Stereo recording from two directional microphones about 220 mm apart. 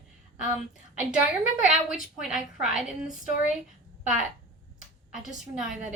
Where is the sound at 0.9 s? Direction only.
5° right (ahead or behind).